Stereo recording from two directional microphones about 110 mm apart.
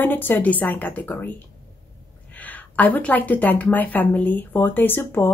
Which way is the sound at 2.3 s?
15° left (ahead or behind).